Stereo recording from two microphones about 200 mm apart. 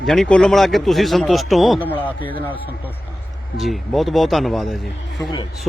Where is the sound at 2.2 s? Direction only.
25° left (ahead or behind).